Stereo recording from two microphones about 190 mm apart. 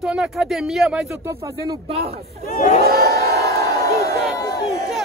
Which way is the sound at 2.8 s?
55° right (ahead or behind).